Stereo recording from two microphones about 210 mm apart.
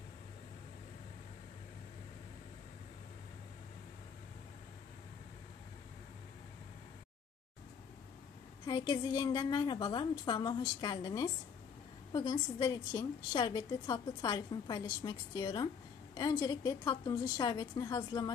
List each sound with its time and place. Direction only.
8.6 s a woman's voice: 15° left (ahead or behind)